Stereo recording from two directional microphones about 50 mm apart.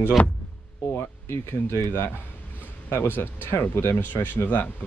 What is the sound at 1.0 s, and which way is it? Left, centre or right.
Speech, left.